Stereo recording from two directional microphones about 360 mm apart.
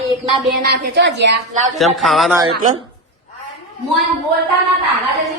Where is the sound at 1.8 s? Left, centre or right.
Centre.